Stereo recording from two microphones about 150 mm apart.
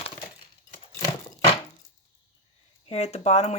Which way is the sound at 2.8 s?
45° left (ahead or behind).